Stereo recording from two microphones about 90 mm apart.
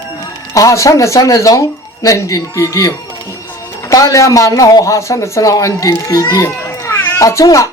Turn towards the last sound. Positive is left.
turn(degrees=35)  # may be behind; listen again after turning